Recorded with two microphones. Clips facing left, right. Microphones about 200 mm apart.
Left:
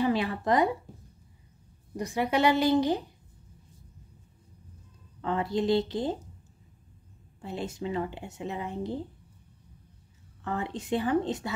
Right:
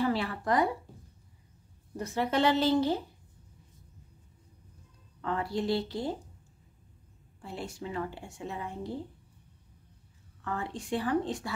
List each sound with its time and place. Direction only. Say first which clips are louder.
0.0 s a woman's voice: left 3 dB; 20° left (ahead or behind)
2.0 s a woman's voice: left 2 dB; 15° left (ahead or behind)
5.2 s a woman's voice: left 4 dB; 20° left (ahead or behind)
7.4 s a woman's voice: left 5 dB; 20° left (ahead or behind)
10.4 s a woman's voice: left 3 dB; 20° left (ahead or behind)